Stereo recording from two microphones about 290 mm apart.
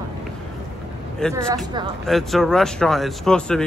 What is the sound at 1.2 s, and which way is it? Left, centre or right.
Speech, centre.